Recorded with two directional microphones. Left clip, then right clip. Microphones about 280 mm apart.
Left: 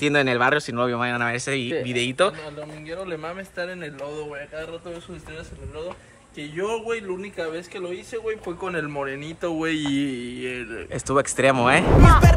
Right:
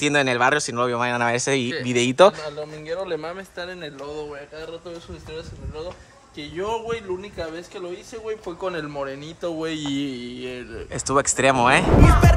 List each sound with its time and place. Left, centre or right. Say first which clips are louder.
0.0 s speech: right 1 dB; centre
2.9 s speech: right 4 dB; right
6.5 s a man's voice: even; right
8.6 s speech: even; right
12.0 s speech: left 2 dB; centre